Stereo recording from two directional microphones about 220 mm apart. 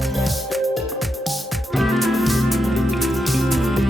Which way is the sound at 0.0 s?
Centre (ahead or behind).